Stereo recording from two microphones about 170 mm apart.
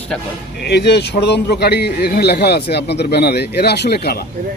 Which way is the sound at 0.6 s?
75° left (ahead or behind).